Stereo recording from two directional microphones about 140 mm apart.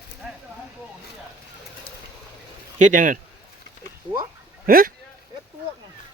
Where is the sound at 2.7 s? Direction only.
65° right (ahead or behind).